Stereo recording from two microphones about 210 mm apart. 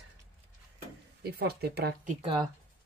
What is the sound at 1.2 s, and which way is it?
Speech, 50° right (ahead or behind).